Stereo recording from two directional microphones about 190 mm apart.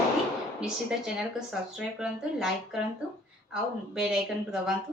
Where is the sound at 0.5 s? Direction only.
5° right (ahead or behind).